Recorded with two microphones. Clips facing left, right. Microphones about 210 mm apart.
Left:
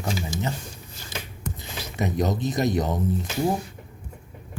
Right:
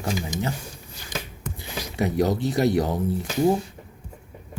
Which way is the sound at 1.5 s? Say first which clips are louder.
Right 4 dB; 15° right (ahead or behind).